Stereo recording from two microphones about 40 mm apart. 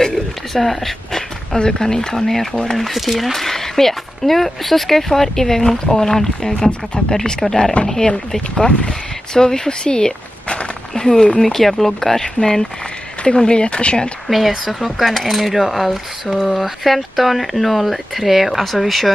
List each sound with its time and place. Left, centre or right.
0.0 s a sound: centre
1.6 s speech: centre
12.2 s speech: centre
14.7 s speech: centre